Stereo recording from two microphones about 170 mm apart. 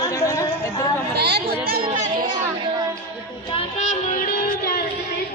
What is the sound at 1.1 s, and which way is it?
Chatter, 75° right (ahead or behind).